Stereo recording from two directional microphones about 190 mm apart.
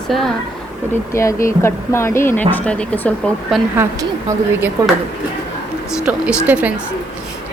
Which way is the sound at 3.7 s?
10° right (ahead or behind).